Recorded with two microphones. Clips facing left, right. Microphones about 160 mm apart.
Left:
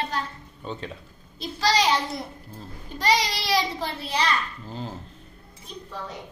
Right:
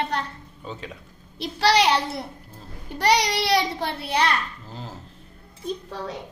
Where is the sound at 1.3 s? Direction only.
65° right (ahead or behind).